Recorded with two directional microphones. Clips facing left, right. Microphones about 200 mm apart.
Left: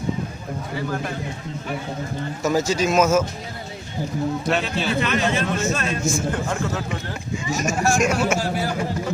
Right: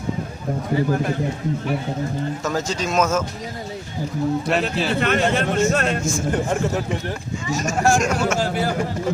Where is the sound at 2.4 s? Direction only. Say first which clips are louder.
Left 8 dB; 10° left (ahead or behind).